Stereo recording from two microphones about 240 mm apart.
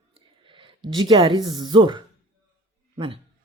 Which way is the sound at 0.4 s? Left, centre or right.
Right.